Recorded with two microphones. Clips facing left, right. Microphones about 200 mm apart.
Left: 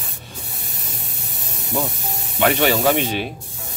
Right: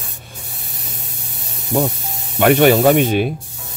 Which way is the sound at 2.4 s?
50° right (ahead or behind).